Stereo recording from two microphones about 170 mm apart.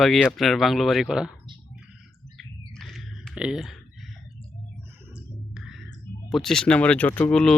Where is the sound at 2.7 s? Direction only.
Centre (ahead or behind).